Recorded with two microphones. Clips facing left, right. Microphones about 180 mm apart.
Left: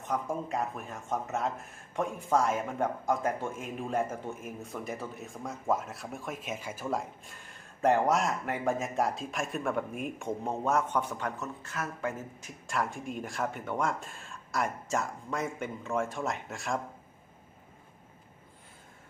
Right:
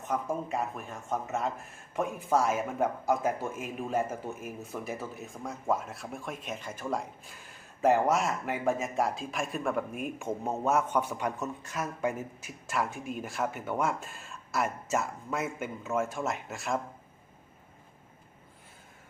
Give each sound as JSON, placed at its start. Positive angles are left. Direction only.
{"t": 0.1, "sound": "speech", "side_deg": 0}